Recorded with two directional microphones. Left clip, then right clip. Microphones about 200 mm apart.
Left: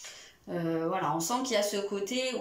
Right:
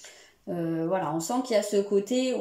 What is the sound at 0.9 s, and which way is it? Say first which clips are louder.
Speech: right 3 dB; 25° right (ahead or behind).